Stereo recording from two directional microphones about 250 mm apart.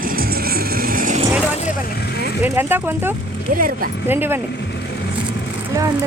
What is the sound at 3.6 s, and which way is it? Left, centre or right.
Speech, right.